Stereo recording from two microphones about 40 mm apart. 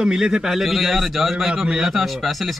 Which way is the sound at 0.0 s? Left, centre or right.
Centre.